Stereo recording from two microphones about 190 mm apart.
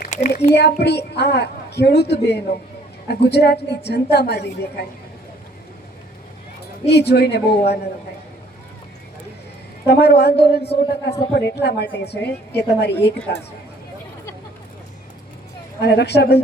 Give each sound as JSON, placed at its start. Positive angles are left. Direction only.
{"t": 0.0, "sound": "a woman's voice", "side_deg": 40}
{"t": 0.5, "sound": "a woman's voice", "side_deg": 60}
{"t": 6.8, "sound": "a woman's voice", "side_deg": 60}
{"t": 9.8, "sound": "a woman's voice", "side_deg": 60}
{"t": 15.8, "sound": "a woman's voice", "side_deg": 60}